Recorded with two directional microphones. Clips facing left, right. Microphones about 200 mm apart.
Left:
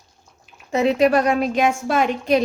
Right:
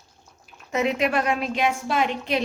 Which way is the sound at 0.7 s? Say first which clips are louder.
Left 6 dB; 35° left (ahead or behind).